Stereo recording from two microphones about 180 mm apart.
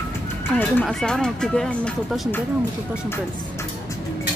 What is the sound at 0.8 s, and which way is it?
Speech, 5° left (ahead or behind).